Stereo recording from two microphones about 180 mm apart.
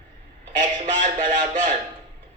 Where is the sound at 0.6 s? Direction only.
45° right (ahead or behind).